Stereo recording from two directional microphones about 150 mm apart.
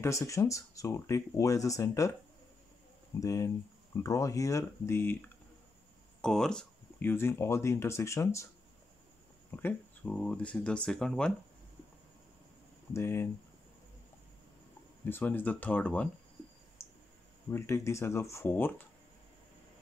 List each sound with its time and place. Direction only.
0.0 s speech: 20° left (ahead or behind)
3.2 s speech: 20° left (ahead or behind)
6.2 s speech: 5° left (ahead or behind); by 8.5 s 20° left (ahead or behind)
9.5 s speech: 10° left (ahead or behind)
12.9 s speech: 15° left (ahead or behind)
15.0 s speech: 15° left (ahead or behind)
16.8 s clicking: 20° left (ahead or behind)
17.5 s speech: 20° left (ahead or behind)